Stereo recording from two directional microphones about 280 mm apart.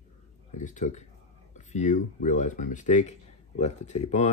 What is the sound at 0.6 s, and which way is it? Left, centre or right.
Speech, left.